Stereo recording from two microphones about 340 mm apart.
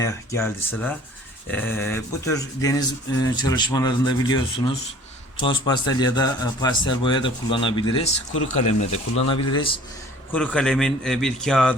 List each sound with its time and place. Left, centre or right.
0.0 s speech: centre
10.3 s a man's voice: centre